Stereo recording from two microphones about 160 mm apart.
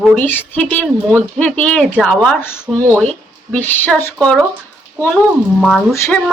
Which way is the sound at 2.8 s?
15° right (ahead or behind).